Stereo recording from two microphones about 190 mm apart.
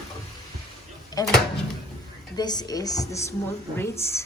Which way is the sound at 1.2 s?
20° left (ahead or behind).